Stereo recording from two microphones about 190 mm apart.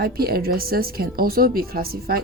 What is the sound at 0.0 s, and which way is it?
Speech, 55° right (ahead or behind).